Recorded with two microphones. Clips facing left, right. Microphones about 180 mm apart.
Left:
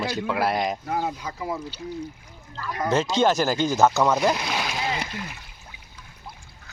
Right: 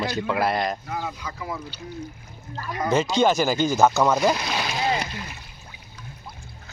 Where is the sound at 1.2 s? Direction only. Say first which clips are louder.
Left 2 dB; 25° left (ahead or behind).